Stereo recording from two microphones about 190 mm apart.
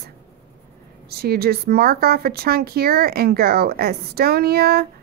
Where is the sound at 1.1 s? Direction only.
55° right (ahead or behind).